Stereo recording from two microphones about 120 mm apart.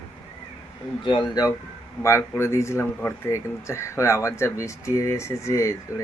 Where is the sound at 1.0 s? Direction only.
40° left (ahead or behind).